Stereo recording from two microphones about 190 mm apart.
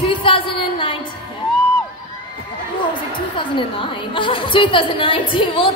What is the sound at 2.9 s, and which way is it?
A woman's voice, 25° left (ahead or behind).